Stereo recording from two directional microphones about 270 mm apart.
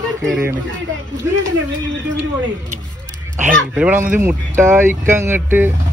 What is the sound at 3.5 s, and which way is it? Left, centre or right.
Speech, centre.